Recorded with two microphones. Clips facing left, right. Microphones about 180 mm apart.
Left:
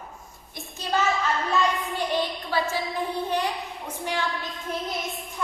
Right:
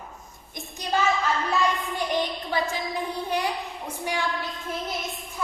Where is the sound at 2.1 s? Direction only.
20° right (ahead or behind).